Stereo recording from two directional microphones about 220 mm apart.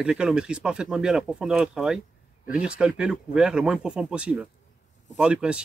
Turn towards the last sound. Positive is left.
turn(degrees=-5)  # may be behind; listen again after turning